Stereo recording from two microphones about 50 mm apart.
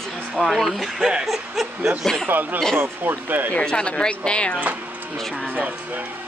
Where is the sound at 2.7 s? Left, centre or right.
Right.